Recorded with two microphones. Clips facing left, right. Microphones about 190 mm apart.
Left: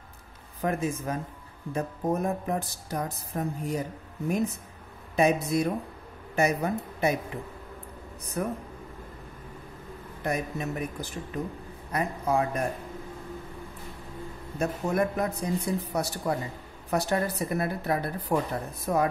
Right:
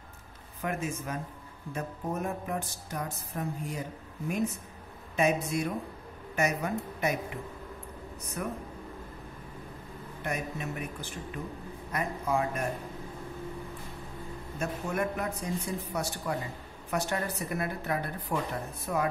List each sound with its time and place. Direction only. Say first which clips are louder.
0.6 s speech: left 5 dB; 35° left (ahead or behind)
5.1 s speech: left 4 dB; 35° left (ahead or behind)
8.4 s speech: left 5 dB; 40° left (ahead or behind)
10.2 s speech: left 5 dB; 35° left (ahead or behind)
14.6 s speech: left 5 dB; 35° left (ahead or behind)